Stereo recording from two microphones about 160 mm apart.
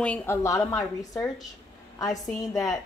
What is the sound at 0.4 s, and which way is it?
A woman's voice, 20° left (ahead or behind).